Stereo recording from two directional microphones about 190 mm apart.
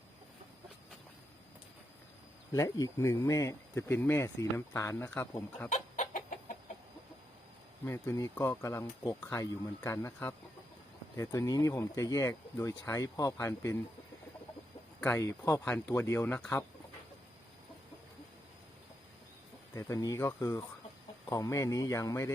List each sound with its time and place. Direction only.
2.5 s speech: 20° left (ahead or behind)
5.6 s chicken: 40° left (ahead or behind)
7.9 s speech: 15° left (ahead or behind)
15.0 s speech: 10° left (ahead or behind)
19.7 s speech: 15° left (ahead or behind)